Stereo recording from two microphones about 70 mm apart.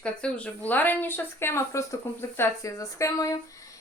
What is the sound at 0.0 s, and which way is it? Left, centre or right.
A woman's voice, centre.